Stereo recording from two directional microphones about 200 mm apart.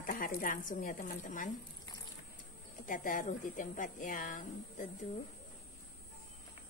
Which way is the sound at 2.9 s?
40° left (ahead or behind).